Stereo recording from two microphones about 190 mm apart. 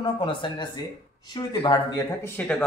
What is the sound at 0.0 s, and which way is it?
Speech, 25° left (ahead or behind).